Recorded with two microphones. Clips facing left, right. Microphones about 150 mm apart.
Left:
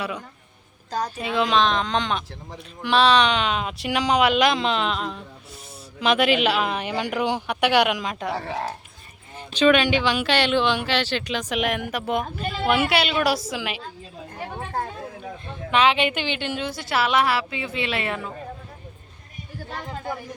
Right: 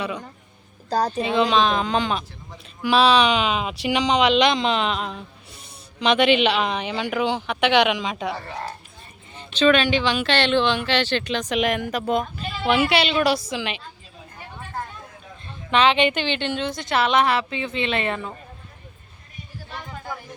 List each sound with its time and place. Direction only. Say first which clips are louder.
0.9 s speech: right 5 dB; 35° right (ahead or behind)
1.4 s speech: right 1 dB; centre (ahead or behind)
9.3 s speech: even; 10° left (ahead or behind)
14.3 s a sound: left 7 dB; 60° left (ahead or behind)
15.7 s speech: right 2 dB; 5° left (ahead or behind)